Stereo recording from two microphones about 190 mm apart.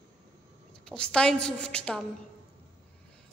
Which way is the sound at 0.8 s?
5° left (ahead or behind).